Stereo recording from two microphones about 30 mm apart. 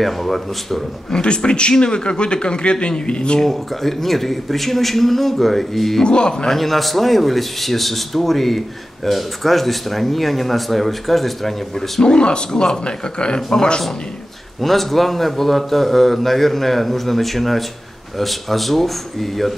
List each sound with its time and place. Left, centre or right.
0.0 s speech: centre
1.1 s a man's voice: left
3.3 s a man's voice: centre
6.0 s a man's voice: left
6.4 s speech: centre
12.0 s a man's voice: left
14.6 s speech: centre